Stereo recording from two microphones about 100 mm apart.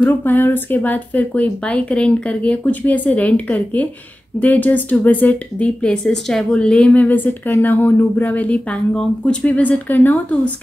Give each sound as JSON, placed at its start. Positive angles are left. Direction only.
{"t": 0.0, "sound": "a woman's voice", "side_deg": 20}